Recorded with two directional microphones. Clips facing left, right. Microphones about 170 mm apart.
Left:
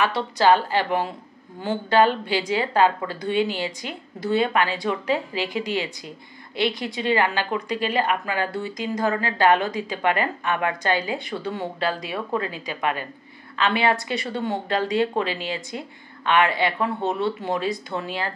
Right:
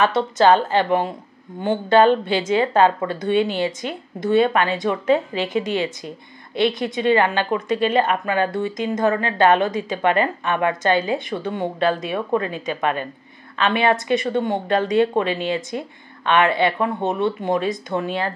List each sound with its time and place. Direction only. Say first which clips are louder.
0.0 s a woman's voice: right 4 dB; 20° right (ahead or behind)